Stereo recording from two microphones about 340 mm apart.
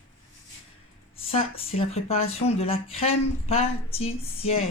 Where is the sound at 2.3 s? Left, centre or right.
Centre.